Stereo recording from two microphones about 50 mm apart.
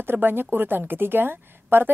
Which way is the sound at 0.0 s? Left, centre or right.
Right.